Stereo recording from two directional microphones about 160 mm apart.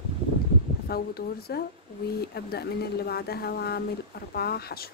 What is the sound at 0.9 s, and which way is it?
Speech, 75° left (ahead or behind).